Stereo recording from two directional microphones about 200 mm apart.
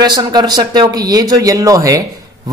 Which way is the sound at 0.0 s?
20° right (ahead or behind).